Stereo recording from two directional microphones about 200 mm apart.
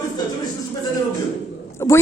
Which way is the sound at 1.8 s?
15° left (ahead or behind).